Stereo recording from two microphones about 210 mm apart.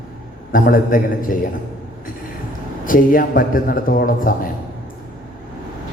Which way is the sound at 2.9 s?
40° left (ahead or behind).